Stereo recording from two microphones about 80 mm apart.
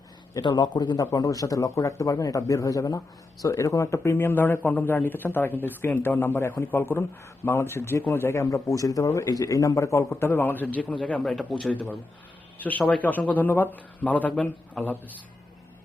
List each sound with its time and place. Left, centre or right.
0.4 s a man's voice: left
1.1 s a man's voice: left; by 14.9 s centre